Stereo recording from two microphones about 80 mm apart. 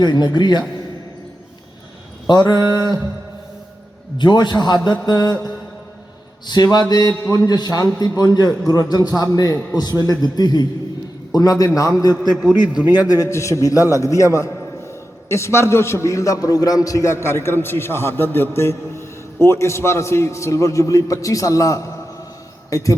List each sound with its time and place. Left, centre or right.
0.0 s a man's voice: left
2.2 s a man's voice: left
4.2 s a man's voice: left
6.5 s a man's voice: left
12.5 s a man's voice: right
13.1 s a man's voice: left